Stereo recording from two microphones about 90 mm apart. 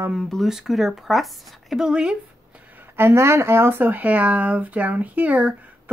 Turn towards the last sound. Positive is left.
turn(degrees=-15)  # may be behind; listen again after turning